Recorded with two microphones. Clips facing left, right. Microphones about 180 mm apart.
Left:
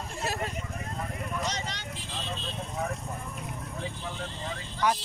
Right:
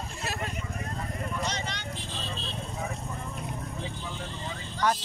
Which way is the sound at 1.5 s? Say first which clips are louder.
Right 1 dB; 35° left (ahead or behind).